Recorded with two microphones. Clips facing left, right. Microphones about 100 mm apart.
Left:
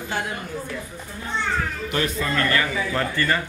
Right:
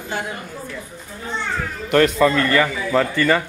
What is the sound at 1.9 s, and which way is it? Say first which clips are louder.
A man's voice: right 13 dB; 70° right (ahead or behind).